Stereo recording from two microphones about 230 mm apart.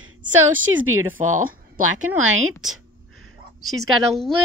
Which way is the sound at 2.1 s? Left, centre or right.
Right.